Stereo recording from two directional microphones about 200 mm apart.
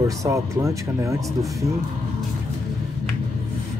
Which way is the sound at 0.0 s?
15° right (ahead or behind).